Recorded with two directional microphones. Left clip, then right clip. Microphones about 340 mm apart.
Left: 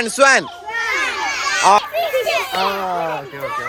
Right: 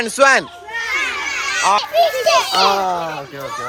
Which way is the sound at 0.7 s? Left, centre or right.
Left.